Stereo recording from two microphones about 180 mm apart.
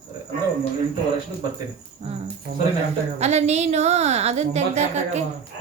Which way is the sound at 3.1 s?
35° right (ahead or behind).